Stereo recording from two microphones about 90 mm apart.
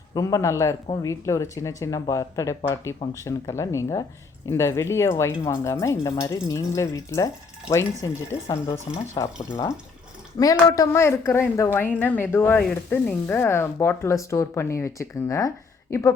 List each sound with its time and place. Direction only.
0.1 s speech: 40° left (ahead or behind)
10.8 s speech: 30° left (ahead or behind)